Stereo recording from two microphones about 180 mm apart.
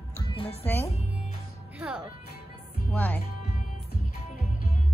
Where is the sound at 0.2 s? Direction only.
30° left (ahead or behind).